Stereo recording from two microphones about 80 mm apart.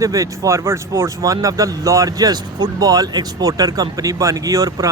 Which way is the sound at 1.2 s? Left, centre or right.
Right.